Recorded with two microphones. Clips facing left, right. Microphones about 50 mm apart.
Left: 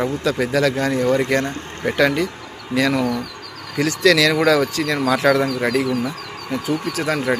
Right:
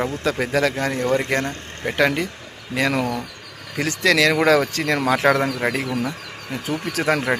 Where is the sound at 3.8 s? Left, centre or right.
Right.